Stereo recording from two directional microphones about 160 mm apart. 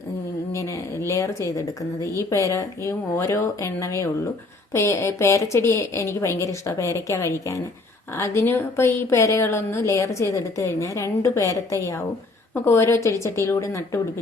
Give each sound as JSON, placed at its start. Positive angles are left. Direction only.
{"t": 0.5, "sound": "a woman's voice", "side_deg": 20}